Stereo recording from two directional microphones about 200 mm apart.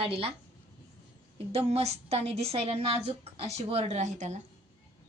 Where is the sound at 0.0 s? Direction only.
30° right (ahead or behind).